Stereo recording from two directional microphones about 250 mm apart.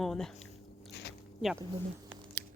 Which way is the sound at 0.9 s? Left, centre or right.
Left.